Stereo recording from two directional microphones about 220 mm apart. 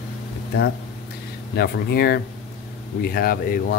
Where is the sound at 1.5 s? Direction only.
45° left (ahead or behind).